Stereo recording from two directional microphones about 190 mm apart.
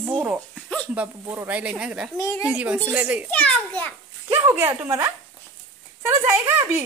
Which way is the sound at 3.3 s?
10° left (ahead or behind).